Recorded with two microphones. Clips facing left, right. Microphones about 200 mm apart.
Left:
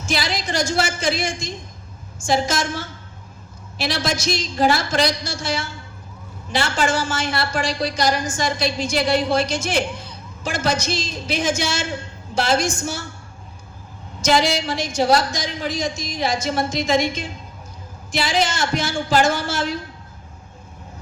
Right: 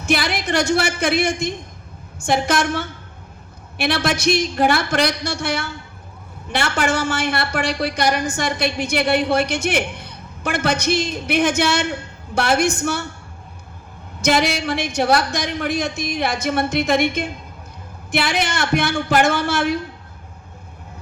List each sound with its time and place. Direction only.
0.0 s a woman's voice: 60° right (ahead or behind)
14.2 s a woman's voice: 60° right (ahead or behind)